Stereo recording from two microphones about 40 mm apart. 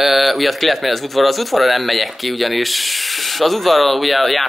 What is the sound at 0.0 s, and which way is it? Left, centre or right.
Speech, centre.